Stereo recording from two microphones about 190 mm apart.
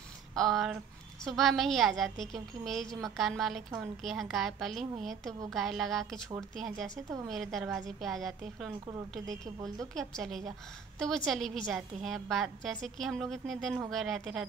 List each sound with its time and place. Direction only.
0.4 s a woman's voice: centre (ahead or behind)
9.3 s a woman's voice: 20° right (ahead or behind)
9.9 s a woman's voice: centre (ahead or behind)